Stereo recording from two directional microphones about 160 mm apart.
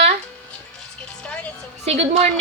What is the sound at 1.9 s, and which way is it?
Speech, 40° right (ahead or behind).